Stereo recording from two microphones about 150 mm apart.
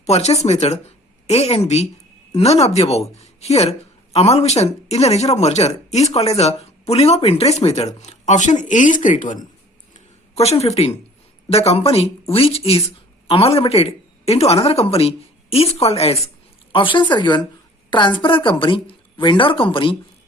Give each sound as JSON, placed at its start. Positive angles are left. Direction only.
{"t": 0.0, "sound": "speech", "side_deg": 45}
{"t": 9.9, "sound": "a sound", "side_deg": 45}
{"t": 11.5, "sound": "a woman's voice", "side_deg": 40}